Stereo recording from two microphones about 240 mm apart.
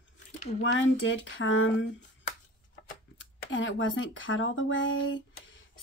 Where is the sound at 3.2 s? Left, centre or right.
Left.